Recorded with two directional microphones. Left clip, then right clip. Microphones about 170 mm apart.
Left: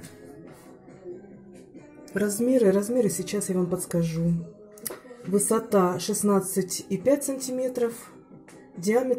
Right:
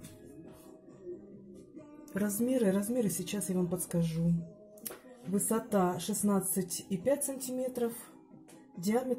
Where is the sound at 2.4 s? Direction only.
5° left (ahead or behind).